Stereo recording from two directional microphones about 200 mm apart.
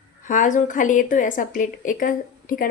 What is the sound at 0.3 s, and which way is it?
A woman's voice, 40° left (ahead or behind).